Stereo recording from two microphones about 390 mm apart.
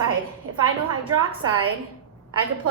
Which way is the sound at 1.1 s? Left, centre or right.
Right.